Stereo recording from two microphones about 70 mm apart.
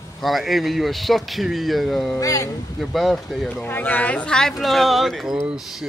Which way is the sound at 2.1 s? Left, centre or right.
Left.